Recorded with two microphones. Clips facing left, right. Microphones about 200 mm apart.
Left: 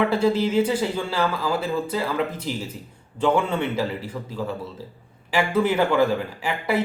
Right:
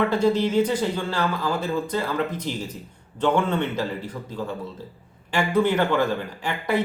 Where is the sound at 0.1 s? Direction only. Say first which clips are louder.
Even; 5° left (ahead or behind).